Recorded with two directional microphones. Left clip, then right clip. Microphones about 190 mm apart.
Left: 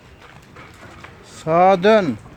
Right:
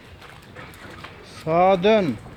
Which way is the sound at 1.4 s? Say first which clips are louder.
Left 4 dB; 25° left (ahead or behind).